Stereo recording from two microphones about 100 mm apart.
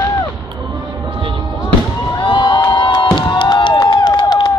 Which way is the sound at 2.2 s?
55° left (ahead or behind).